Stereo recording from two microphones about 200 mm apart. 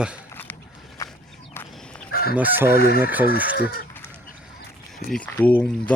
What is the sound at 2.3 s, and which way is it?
Chicken, 10° right (ahead or behind).